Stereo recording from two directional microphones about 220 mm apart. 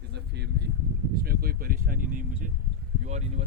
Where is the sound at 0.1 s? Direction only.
50° right (ahead or behind).